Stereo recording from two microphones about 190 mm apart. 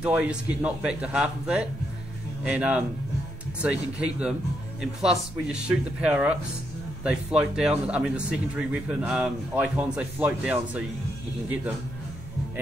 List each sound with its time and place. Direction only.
0.0 s a man's voice: 5° right (ahead or behind)
5.5 s a man's voice: 5° right (ahead or behind)